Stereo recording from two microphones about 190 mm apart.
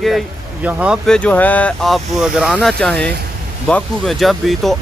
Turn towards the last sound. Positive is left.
turn(degrees=0)  # may be behind; listen again after turning